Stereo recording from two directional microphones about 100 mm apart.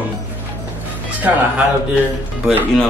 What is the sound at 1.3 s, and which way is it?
Speech, 15° right (ahead or behind).